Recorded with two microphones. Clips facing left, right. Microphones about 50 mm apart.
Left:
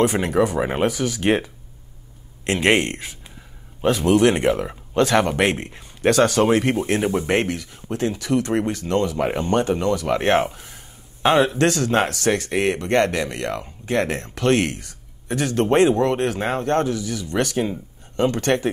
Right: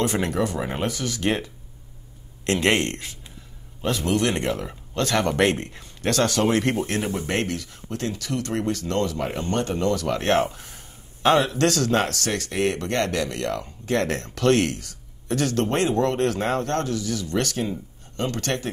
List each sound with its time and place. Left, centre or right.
0.0 s speech: centre
0.6 s speech: left
0.8 s speech: centre
4.5 s speech: left
6.9 s speech: left